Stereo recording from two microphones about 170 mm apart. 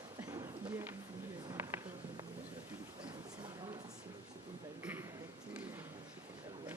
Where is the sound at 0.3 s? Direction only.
20° right (ahead or behind).